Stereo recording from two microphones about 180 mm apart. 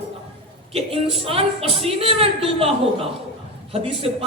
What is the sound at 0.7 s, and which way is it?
A woman's voice, 30° right (ahead or behind).